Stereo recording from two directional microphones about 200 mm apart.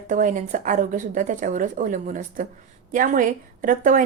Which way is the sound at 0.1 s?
40° right (ahead or behind).